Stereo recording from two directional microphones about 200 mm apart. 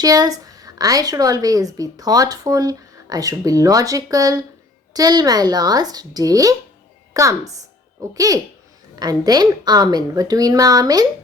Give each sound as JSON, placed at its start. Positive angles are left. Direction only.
{"t": 0.0, "sound": "a woman's voice", "side_deg": -20}